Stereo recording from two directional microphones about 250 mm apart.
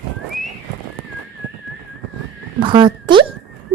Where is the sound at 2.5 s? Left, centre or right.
Centre.